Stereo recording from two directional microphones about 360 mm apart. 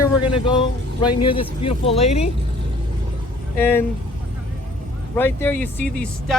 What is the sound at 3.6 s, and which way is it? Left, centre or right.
Speech, centre.